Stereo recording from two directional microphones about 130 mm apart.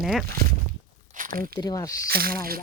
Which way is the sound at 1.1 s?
90° right.